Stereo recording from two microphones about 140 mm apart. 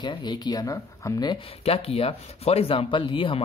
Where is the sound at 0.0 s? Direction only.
35° left (ahead or behind).